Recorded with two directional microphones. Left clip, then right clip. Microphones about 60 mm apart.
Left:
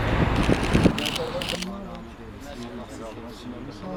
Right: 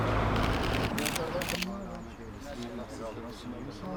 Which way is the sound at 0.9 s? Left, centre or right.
Right.